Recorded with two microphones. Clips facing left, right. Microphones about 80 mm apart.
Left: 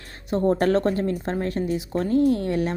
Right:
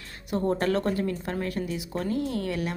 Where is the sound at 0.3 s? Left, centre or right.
Left.